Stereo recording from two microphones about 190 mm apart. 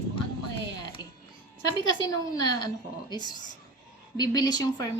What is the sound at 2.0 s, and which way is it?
A woman's voice, 20° left (ahead or behind).